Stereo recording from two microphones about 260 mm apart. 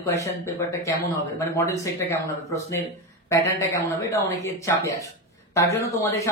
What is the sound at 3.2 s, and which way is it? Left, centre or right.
Speech, centre.